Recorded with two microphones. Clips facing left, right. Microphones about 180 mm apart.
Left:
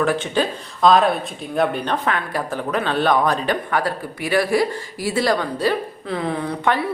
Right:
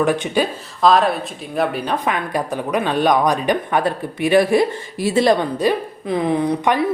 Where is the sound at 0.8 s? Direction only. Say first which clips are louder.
Even; centre (ahead or behind).